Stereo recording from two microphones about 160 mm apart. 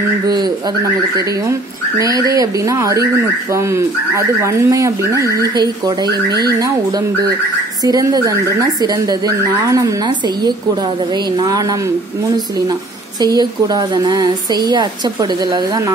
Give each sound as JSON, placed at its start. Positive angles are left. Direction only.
{"t": 2.0, "sound": "a woman's voice", "side_deg": -20}
{"t": 7.8, "sound": "a woman's voice", "side_deg": -25}
{"t": 13.2, "sound": "a woman's voice", "side_deg": -25}